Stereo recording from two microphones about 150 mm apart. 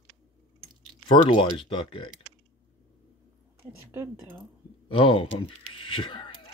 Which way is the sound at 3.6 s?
15° right (ahead or behind).